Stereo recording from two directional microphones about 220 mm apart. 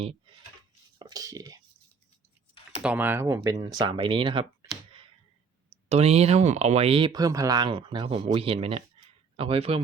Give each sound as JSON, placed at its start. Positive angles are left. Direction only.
{"t": 0.0, "sound": "speech", "side_deg": -25}
{"t": 0.9, "sound": "speech", "side_deg": -15}
{"t": 2.8, "sound": "speech", "side_deg": -10}
{"t": 5.7, "sound": "speech", "side_deg": -30}